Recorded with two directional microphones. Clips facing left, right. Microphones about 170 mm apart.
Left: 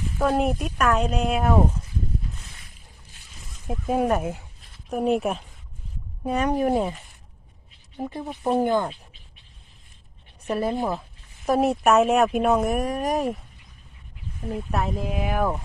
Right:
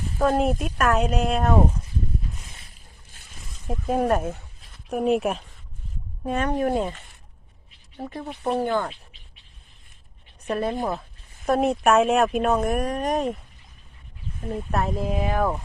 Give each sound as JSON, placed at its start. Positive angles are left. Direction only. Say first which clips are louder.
{"t": 0.2, "sound": "speech", "louder": "right 1 dB", "side_deg": 0}
{"t": 3.7, "sound": "speech", "louder": "even", "side_deg": 5}
{"t": 4.9, "sound": "speech", "louder": "right 1 dB", "side_deg": 0}
{"t": 6.2, "sound": "speech", "louder": "left 1 dB", "side_deg": 10}
{"t": 7.9, "sound": "speech", "louder": "left 2 dB", "side_deg": 15}
{"t": 10.4, "sound": "speech", "louder": "left 1 dB", "side_deg": 5}
{"t": 14.4, "sound": "speech", "louder": "right 1 dB", "side_deg": 0}